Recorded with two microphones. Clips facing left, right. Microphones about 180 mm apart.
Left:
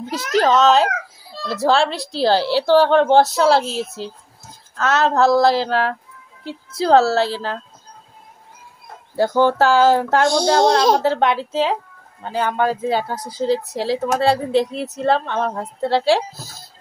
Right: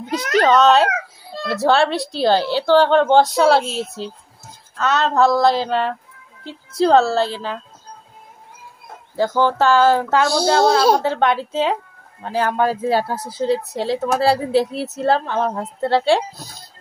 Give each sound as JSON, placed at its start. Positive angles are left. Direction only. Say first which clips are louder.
{"t": 0.4, "sound": "speech", "louder": "right 1 dB", "side_deg": 0}
{"t": 3.6, "sound": "a woman's voice", "louder": "left 1 dB", "side_deg": -25}
{"t": 4.7, "sound": "speech", "louder": "even", "side_deg": 0}
{"t": 9.1, "sound": "speech", "louder": "left 2 dB", "side_deg": 10}
{"t": 10.0, "sound": "speech", "louder": "left 1 dB", "side_deg": -5}
{"t": 11.0, "sound": "speech", "louder": "left 1 dB", "side_deg": 5}